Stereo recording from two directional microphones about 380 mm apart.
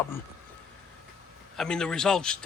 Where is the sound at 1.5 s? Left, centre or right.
Centre.